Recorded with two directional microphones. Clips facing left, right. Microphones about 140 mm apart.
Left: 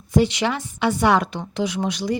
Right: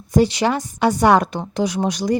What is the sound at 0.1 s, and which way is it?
Speech, 40° right (ahead or behind).